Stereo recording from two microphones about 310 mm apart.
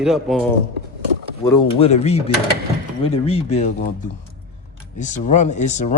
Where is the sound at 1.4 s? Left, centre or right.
Centre.